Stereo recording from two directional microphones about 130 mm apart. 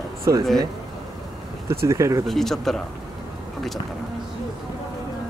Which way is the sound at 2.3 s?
Centre (ahead or behind).